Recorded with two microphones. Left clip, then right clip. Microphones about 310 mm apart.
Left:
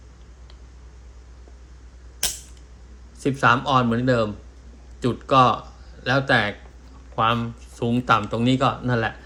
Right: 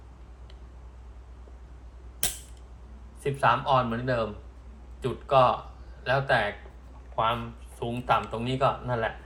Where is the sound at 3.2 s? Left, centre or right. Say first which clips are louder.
Left 5 dB; left.